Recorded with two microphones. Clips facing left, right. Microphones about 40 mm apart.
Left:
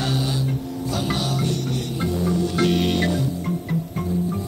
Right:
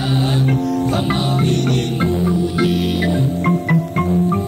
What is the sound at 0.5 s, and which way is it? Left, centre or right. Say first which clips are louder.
Music: right 10 dB; right.